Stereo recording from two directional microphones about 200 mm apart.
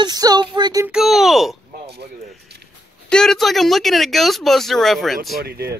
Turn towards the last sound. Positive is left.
turn(degrees=-50)  # may be behind; listen again after turning